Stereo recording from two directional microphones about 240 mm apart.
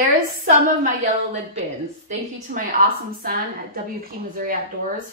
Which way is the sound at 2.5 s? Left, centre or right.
Right.